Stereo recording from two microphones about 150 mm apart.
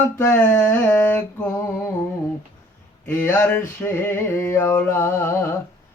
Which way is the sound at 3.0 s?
15° left (ahead or behind).